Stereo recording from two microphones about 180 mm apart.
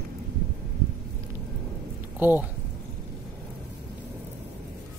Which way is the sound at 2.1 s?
10° right (ahead or behind).